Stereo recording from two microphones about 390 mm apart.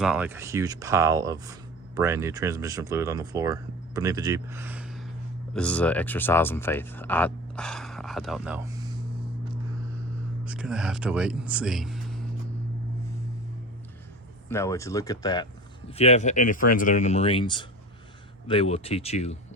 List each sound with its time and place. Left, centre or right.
0.0 s speech: centre
10.4 s speech: centre
14.5 s speech: centre